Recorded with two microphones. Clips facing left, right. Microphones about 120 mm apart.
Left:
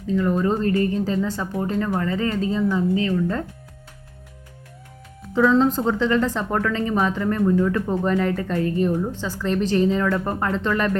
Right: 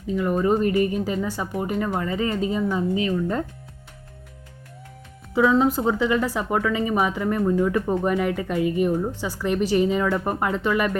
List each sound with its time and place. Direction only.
0.1 s speech: 15° right (ahead or behind)
5.3 s speech: 10° right (ahead or behind)